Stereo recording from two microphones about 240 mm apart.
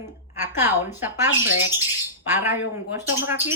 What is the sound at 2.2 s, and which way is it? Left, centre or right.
A woman's voice, centre.